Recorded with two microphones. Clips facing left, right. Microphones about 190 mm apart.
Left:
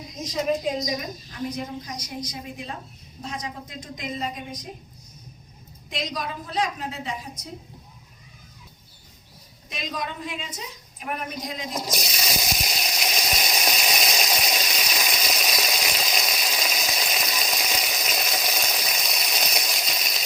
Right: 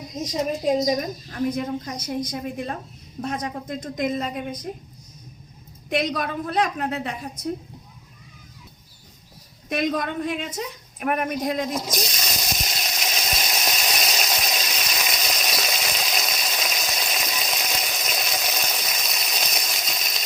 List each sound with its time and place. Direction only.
1.3 s a woman's voice: 55° right (ahead or behind)
5.9 s a woman's voice: 60° right (ahead or behind)
9.6 s a woman's voice: 55° right (ahead or behind)
11.9 s water: 5° left (ahead or behind)